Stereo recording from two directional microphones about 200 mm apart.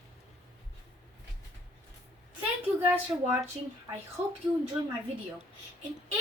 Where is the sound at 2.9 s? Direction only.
10° right (ahead or behind).